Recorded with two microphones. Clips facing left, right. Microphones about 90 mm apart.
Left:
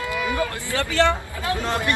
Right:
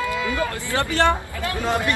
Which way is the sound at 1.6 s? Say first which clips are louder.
Right 4 dB; 20° right (ahead or behind).